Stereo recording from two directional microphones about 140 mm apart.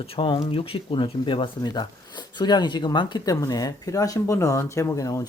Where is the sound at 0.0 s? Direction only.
40° left (ahead or behind).